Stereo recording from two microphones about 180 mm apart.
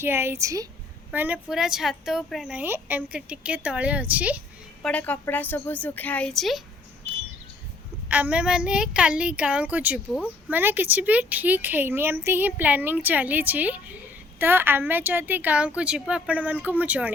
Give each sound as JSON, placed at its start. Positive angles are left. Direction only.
{"t": 0.0, "sound": "speech", "side_deg": -15}
{"t": 4.8, "sound": "a woman's voice", "side_deg": 10}
{"t": 8.0, "sound": "speech", "side_deg": -10}